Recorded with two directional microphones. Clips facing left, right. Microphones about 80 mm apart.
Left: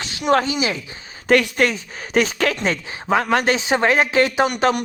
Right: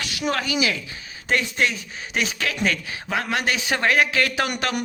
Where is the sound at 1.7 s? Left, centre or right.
Left.